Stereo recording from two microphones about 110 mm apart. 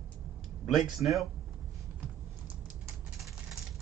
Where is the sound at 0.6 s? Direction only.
Centre (ahead or behind).